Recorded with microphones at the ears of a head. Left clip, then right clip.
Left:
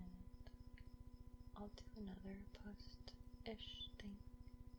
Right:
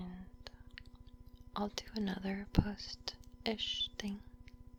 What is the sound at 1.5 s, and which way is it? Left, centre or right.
Speech, right.